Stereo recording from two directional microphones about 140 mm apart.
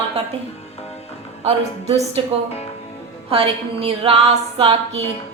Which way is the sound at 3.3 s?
40° right (ahead or behind).